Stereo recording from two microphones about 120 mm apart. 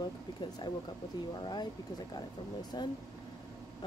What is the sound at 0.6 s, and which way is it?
Speech, 35° left (ahead or behind).